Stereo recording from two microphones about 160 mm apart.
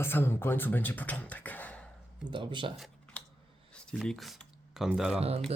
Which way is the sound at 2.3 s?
30° right (ahead or behind).